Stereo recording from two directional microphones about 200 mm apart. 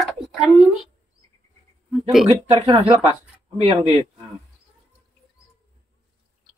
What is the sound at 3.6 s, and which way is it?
Speech, 25° right (ahead or behind).